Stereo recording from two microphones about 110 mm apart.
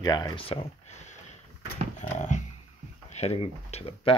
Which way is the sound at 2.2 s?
90° left.